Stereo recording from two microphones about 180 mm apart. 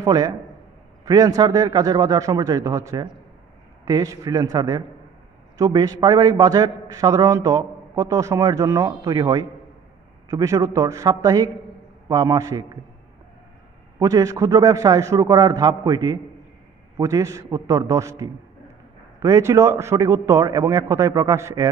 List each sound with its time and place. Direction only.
0.0 s a man's voice: 20° right (ahead or behind)
13.9 s a man's voice: 20° right (ahead or behind)